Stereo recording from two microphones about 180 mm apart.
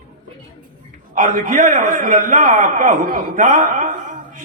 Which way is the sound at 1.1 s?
45° right (ahead or behind).